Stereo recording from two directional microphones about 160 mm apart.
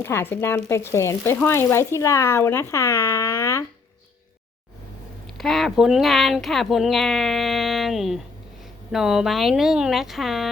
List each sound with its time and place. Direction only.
0.0 s speech: 15° left (ahead or behind)
5.2 s speech: centre (ahead or behind)